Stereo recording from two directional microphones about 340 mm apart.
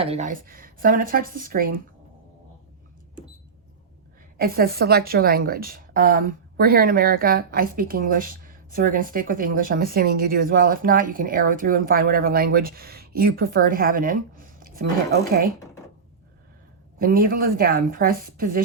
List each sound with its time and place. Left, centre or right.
0.0 s a woman's voice: centre
4.4 s a woman's voice: right
17.0 s a woman's voice: right